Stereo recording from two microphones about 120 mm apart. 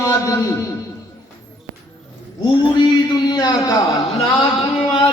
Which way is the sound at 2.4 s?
40° left (ahead or behind).